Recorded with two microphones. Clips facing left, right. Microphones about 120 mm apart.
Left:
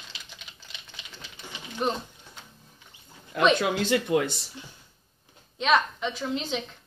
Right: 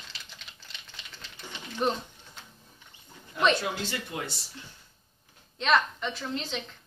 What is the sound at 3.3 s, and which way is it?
Speech, 90° left.